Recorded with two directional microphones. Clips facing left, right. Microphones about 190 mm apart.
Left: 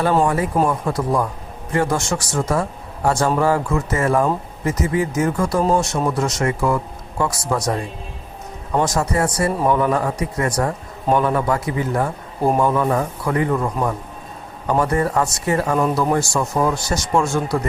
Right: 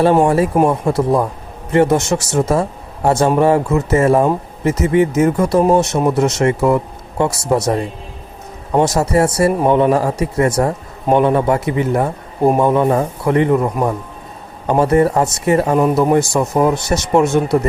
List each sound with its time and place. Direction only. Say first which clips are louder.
0.0 s speech: right 6 dB; 25° right (ahead or behind)